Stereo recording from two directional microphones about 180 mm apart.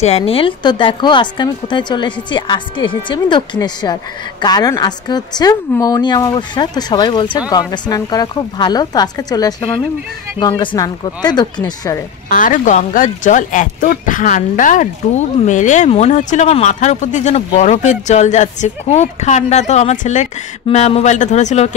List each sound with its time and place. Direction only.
0.0 s speech: 35° left (ahead or behind)
12.3 s speech: 45° left (ahead or behind)